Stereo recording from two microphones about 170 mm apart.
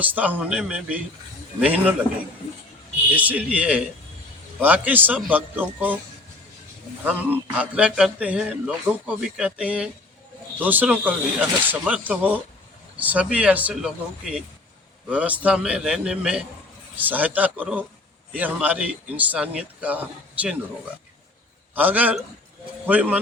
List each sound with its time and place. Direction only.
0.0 s a man's voice: 10° right (ahead or behind)
3.2 s a man's voice: 10° right (ahead or behind)
7.0 s a man's voice: 10° right (ahead or behind)
21.8 s a man's voice: 10° right (ahead or behind)